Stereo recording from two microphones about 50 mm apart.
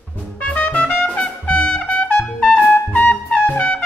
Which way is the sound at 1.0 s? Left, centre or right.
Left.